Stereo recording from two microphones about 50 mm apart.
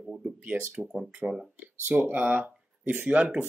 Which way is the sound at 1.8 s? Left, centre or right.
Right.